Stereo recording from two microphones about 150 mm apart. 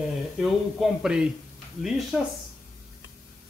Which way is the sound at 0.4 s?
Centre (ahead or behind).